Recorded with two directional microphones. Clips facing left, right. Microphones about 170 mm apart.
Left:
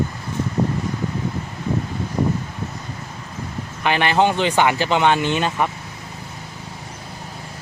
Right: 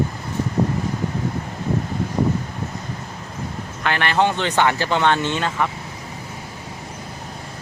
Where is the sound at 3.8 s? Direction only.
15° left (ahead or behind).